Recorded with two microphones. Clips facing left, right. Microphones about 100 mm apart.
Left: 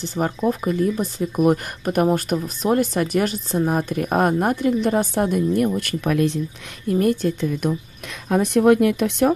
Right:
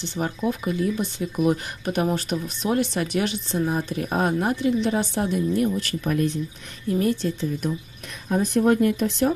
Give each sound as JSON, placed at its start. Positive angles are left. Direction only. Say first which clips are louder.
{"t": 0.0, "sound": "speech", "louder": "left 4 dB", "side_deg": 40}
{"t": 6.9, "sound": "speech", "louder": "left 4 dB", "side_deg": 50}
{"t": 8.3, "sound": "speech", "louder": "left 4 dB", "side_deg": 75}